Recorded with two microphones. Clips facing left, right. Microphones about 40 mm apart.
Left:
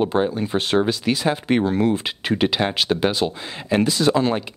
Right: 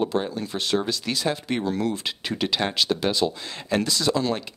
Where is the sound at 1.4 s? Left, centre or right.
Left.